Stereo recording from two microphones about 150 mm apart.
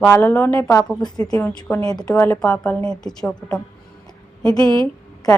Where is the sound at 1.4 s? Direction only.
10° left (ahead or behind).